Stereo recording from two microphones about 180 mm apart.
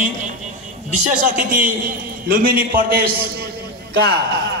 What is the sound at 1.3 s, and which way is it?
A man's voice, 50° right (ahead or behind).